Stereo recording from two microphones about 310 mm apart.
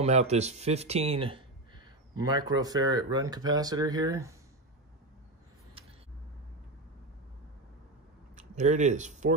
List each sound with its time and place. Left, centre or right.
0.0 s speech: right
8.4 s speech: right